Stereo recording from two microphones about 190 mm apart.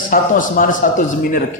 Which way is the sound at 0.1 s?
45° left (ahead or behind).